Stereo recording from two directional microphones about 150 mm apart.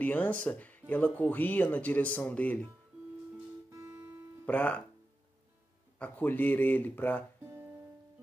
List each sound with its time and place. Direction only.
0.0 s speech: 10° left (ahead or behind)
3.7 s music: 20° right (ahead or behind)
4.5 s speech: 10° left (ahead or behind)
5.9 s speech: 10° left (ahead or behind)
7.4 s music: 15° right (ahead or behind)